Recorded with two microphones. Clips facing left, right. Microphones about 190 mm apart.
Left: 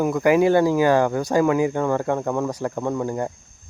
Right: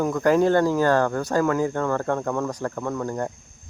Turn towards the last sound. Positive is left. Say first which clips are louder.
# left 3 dB
turn(degrees=10)  # may be behind; listen again after turning